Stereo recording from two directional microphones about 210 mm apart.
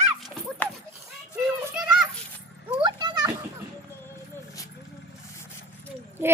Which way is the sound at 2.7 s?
20° right (ahead or behind).